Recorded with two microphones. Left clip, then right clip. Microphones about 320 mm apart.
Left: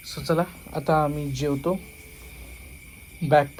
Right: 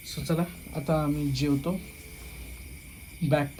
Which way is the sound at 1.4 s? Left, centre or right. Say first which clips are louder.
Left 2 dB; left.